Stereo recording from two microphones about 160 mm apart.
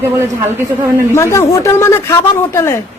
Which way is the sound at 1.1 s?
20° left (ahead or behind).